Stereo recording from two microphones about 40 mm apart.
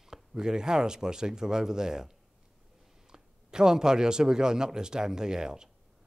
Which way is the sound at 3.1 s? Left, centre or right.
Centre.